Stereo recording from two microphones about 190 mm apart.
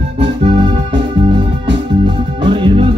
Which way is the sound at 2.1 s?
25° right (ahead or behind).